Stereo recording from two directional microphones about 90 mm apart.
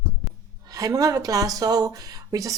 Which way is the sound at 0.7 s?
40° right (ahead or behind).